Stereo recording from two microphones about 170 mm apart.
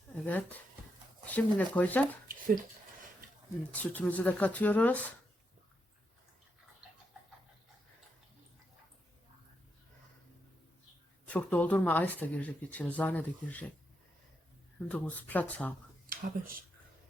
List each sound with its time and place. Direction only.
0.1 s a sound: 10° left (ahead or behind)
1.3 s speech: 10° left (ahead or behind)
2.2 s a sound: 55° right (ahead or behind)
3.7 s speech: 10° left (ahead or behind)
11.3 s speech: 10° left (ahead or behind)
14.8 s speech: 10° left (ahead or behind)
16.0 s speech: 60° right (ahead or behind)